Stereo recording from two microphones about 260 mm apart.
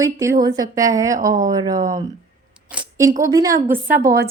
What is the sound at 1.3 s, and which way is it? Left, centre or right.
Speech, right.